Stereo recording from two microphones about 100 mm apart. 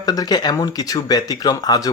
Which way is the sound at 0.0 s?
40° left (ahead or behind).